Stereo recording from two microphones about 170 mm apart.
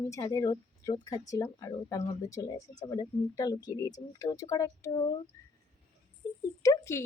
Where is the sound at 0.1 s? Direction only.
20° left (ahead or behind).